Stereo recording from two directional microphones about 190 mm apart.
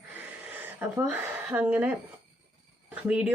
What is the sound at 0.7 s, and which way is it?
Speech, 10° right (ahead or behind).